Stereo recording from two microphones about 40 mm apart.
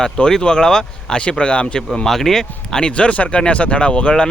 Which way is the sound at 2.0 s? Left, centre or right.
Centre.